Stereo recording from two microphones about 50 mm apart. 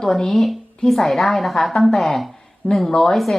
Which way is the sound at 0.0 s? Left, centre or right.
Centre.